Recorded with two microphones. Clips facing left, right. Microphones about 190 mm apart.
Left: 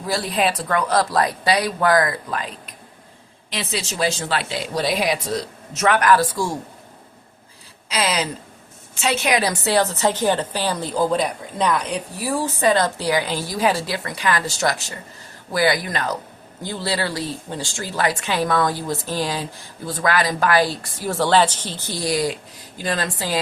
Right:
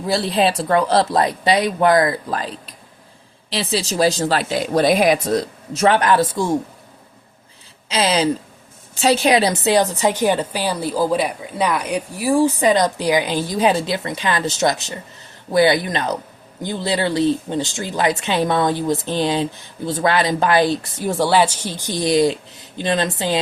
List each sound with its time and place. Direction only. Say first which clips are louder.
0.0 s speech: right 4 dB; 25° right (ahead or behind); by 5.5 s 50° right (ahead or behind)
5.7 s speech: right 2 dB; 30° right (ahead or behind)
7.9 s a woman's voice: right 5 dB; 25° right (ahead or behind)